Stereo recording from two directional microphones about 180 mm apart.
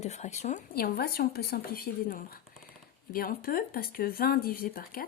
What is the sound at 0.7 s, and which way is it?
Speech, 60° left (ahead or behind).